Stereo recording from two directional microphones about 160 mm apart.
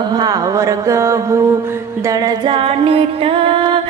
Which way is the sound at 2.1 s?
25° right (ahead or behind).